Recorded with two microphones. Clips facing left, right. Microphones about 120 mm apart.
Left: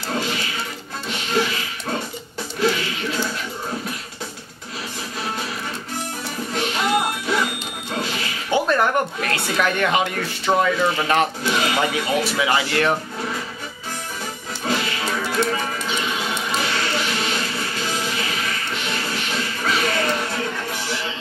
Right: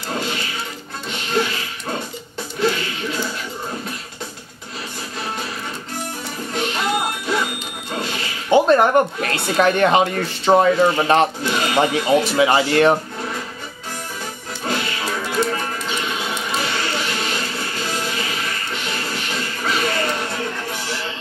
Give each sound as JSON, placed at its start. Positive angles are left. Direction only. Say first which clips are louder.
{"t": 0.1, "sound": "music", "louder": "even", "side_deg": 0}
{"t": 6.5, "sound": "music", "louder": "left 1 dB", "side_deg": 0}
{"t": 8.5, "sound": "a sound", "louder": "right 6 dB", "side_deg": -25}
{"t": 9.6, "sound": "speech", "louder": "right 6 dB", "side_deg": -35}
{"t": 11.4, "sound": "sheep", "louder": "right 2 dB", "side_deg": 0}
{"t": 12.4, "sound": "speech", "louder": "right 5 dB", "side_deg": -30}
{"t": 14.6, "sound": "music", "louder": "even", "side_deg": 0}